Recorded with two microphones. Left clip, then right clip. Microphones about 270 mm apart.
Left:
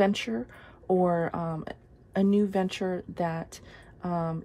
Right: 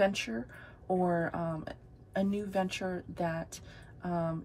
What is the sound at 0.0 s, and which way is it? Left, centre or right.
Speech, left.